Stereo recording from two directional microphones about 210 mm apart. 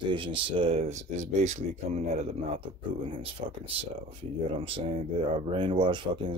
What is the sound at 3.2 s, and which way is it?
Speech, 25° right (ahead or behind).